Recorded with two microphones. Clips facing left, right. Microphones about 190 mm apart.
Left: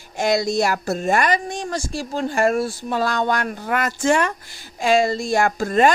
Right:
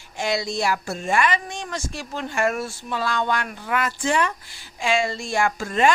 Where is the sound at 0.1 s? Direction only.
45° left (ahead or behind).